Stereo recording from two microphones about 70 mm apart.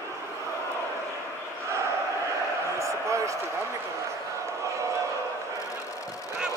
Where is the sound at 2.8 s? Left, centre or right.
Right.